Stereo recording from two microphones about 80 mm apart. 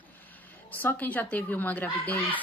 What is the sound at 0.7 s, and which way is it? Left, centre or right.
A woman's voice, left.